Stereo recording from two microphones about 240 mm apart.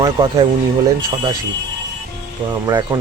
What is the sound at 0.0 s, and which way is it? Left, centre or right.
Speech, right.